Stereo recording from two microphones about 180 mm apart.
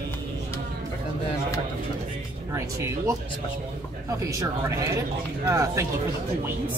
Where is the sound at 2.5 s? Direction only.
15° right (ahead or behind).